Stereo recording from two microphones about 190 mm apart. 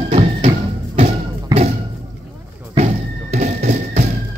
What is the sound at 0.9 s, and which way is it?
Music, 30° right (ahead or behind).